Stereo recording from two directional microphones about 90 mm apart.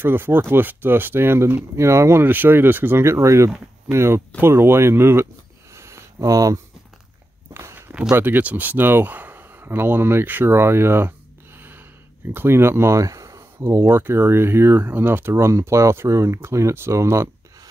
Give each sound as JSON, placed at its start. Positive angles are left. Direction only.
{"t": 0.0, "sound": "speech", "side_deg": -25}
{"t": 7.5, "sound": "walk", "side_deg": -30}
{"t": 8.2, "sound": "speech", "side_deg": -20}